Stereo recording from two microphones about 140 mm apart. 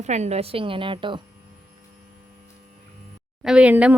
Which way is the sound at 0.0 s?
55° right (ahead or behind).